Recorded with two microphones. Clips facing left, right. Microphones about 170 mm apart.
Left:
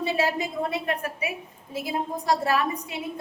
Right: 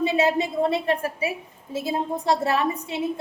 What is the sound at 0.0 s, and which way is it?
A woman's voice, 20° right (ahead or behind).